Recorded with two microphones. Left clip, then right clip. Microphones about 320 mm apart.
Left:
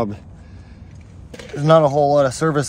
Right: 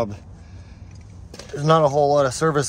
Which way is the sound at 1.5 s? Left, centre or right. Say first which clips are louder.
Left 3 dB; centre.